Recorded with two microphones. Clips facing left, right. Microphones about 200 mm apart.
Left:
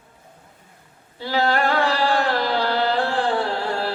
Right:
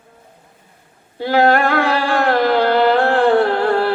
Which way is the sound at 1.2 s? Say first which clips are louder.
Right 7 dB; 55° right (ahead or behind).